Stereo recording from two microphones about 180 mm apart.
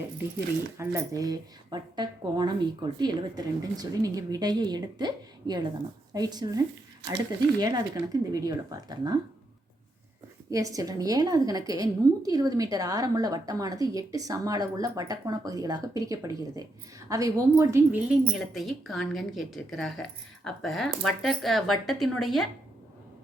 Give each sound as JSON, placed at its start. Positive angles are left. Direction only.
{"t": 0.8, "sound": "a woman's voice", "side_deg": -15}
{"t": 7.6, "sound": "a woman's voice", "side_deg": -20}
{"t": 10.5, "sound": "a woman's voice", "side_deg": -20}